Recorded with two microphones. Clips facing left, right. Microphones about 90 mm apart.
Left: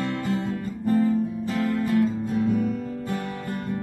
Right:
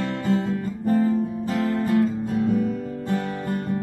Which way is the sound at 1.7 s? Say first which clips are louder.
Right 2 dB; 35° right (ahead or behind).